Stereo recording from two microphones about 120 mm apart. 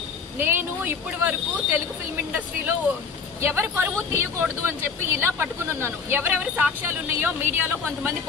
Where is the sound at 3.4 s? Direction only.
20° right (ahead or behind).